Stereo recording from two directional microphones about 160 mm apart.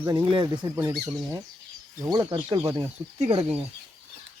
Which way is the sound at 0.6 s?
15° right (ahead or behind).